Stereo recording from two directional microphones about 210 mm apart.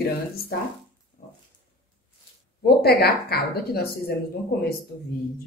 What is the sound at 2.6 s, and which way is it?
A woman's voice, 50° left (ahead or behind).